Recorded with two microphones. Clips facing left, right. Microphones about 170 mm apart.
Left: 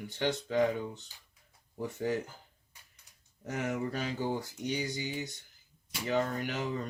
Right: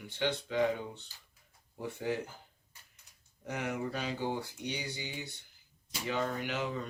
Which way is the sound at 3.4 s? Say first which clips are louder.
Left 2 dB; 45° left (ahead or behind).